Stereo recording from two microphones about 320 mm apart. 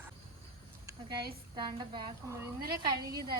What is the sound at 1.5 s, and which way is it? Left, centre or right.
Speech, centre.